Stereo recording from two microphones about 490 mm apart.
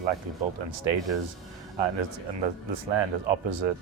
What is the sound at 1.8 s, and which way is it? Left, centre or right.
Speech, right.